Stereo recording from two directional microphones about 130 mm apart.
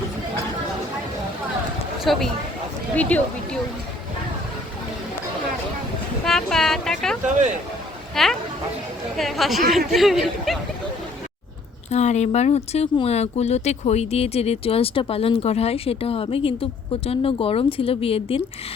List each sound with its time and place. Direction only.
2.0 s speech: centre (ahead or behind)
6.2 s a sound: 5° left (ahead or behind)
8.1 s speech: 5° left (ahead or behind)
11.9 s speech: 60° left (ahead or behind)